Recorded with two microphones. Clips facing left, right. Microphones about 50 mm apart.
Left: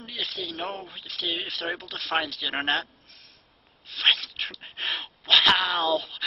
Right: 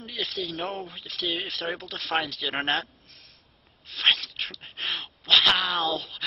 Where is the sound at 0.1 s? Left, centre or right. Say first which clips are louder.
Right 2 dB; centre.